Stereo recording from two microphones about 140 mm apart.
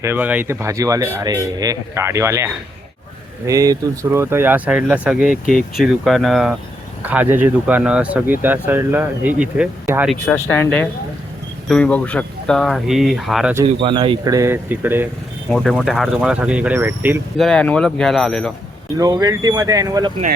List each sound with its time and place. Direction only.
0.0 s speech: 15° right (ahead or behind)
7.0 s speech: 10° right (ahead or behind)
10.2 s speech: 15° left (ahead or behind); by 13.5 s centre (ahead or behind)
13.8 s speech: 40° right (ahead or behind)
14.3 s speech: 20° right (ahead or behind)
15.4 s speech: 5° left (ahead or behind); by 17.2 s 15° right (ahead or behind)
17.3 s speech: 5° left (ahead or behind)
18.9 s speech: 25° right (ahead or behind)